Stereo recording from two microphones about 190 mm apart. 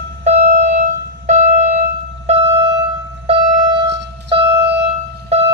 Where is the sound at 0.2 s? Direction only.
35° right (ahead or behind).